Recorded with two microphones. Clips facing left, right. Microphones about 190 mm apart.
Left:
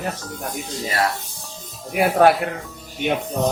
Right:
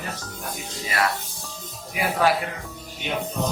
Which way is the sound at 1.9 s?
55° left (ahead or behind).